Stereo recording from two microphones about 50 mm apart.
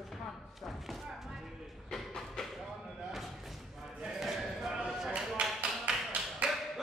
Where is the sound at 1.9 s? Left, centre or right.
Centre.